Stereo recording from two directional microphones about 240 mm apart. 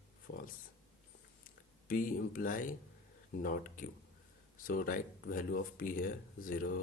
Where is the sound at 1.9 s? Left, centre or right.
Left.